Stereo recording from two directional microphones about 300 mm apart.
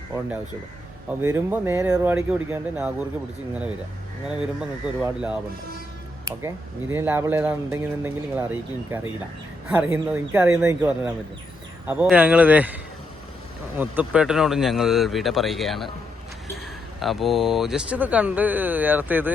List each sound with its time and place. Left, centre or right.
1.2 s speech: centre
4.4 s speech: centre
6.9 s speech: centre
13.7 s speech: centre
17.0 s speech: centre